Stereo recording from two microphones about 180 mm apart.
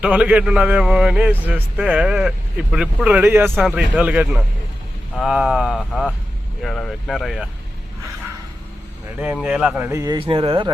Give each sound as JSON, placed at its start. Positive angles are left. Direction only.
{"t": 0.0, "sound": "a man's voice", "side_deg": -10}
{"t": 9.1, "sound": "a man's voice", "side_deg": -5}
{"t": 10.2, "sound": "speech", "side_deg": -30}